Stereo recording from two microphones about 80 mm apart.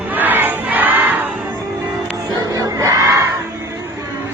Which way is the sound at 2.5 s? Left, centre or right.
Right.